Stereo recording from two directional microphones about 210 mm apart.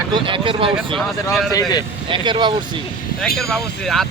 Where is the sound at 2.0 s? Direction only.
20° right (ahead or behind).